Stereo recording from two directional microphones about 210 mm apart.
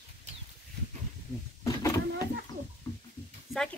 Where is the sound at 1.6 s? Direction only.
15° left (ahead or behind).